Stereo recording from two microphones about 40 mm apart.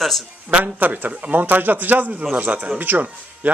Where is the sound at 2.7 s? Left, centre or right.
Right.